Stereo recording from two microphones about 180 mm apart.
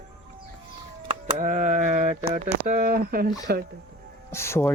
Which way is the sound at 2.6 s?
50° right (ahead or behind).